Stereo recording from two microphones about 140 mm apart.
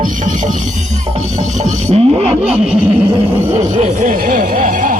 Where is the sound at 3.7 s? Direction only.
65° right (ahead or behind).